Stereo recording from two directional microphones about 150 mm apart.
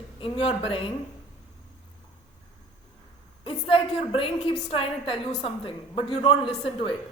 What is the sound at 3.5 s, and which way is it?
A woman's voice, 35° left (ahead or behind).